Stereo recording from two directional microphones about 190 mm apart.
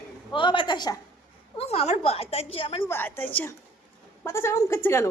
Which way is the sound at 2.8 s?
10° left (ahead or behind).